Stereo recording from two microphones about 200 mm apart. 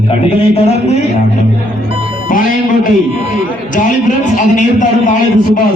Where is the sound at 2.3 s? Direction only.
40° left (ahead or behind).